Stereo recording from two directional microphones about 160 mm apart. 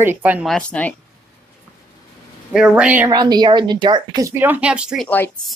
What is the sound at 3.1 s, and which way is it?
Speech, 25° right (ahead or behind).